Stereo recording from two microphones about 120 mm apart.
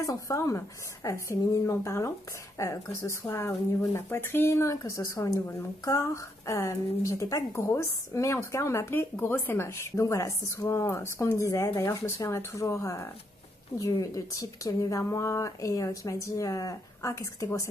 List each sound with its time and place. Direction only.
0.0 s speech: 30° left (ahead or behind)